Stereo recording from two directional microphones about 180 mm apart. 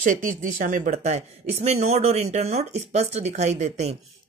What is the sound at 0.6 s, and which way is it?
Speech, 50° right (ahead or behind).